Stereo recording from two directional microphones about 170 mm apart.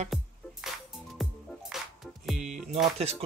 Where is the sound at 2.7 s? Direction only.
40° right (ahead or behind).